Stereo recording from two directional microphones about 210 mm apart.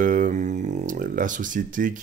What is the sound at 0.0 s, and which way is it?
Speech, 40° right (ahead or behind).